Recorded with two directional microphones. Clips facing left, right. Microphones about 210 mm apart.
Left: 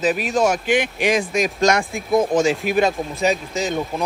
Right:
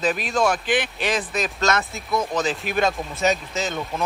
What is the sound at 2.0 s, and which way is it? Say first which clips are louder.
Speech: left 7 dB; 50° left (ahead or behind).